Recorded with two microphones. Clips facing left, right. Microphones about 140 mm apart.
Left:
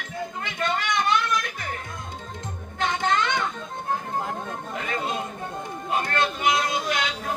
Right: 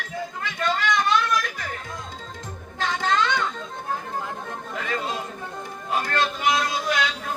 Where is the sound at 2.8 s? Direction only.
20° left (ahead or behind).